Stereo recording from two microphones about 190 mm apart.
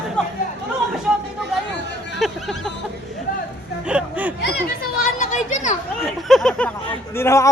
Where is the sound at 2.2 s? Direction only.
Centre (ahead or behind).